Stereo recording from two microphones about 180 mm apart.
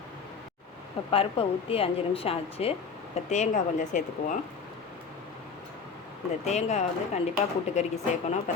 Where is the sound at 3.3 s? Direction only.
45° left (ahead or behind).